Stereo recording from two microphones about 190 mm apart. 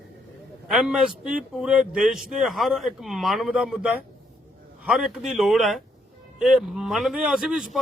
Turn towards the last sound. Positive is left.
turn(degrees=-5)  # may be behind; listen again after turning